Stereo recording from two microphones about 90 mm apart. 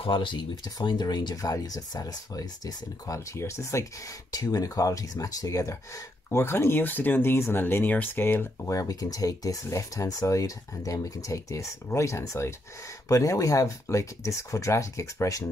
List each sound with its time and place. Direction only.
0.0 s speech: 65° left (ahead or behind); by 3.8 s 30° left (ahead or behind)
4.3 s speech: 45° left (ahead or behind)
6.3 s speech: 30° left (ahead or behind)
8.6 s speech: 40° left (ahead or behind)